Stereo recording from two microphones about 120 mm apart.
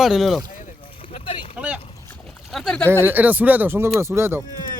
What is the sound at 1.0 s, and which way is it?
Boat, 50° left (ahead or behind).